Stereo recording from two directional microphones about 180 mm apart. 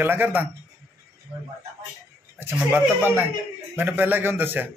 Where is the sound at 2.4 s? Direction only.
10° right (ahead or behind).